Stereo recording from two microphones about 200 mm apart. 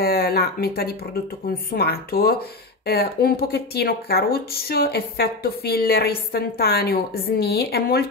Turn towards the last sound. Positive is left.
turn(degrees=50)  # may be behind; listen again after turning